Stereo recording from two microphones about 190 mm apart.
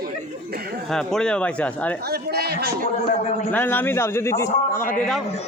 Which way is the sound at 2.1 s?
55° right (ahead or behind).